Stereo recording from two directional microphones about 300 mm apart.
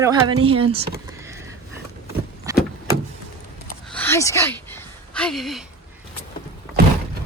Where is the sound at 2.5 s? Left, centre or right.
Centre.